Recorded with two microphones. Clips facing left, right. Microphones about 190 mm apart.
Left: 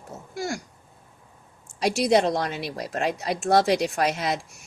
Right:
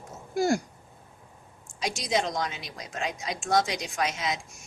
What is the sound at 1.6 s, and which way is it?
Speech, 65° left (ahead or behind).